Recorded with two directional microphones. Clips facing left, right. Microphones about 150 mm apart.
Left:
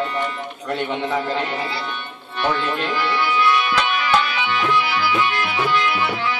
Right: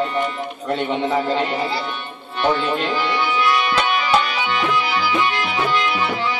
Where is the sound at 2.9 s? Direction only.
Centre (ahead or behind).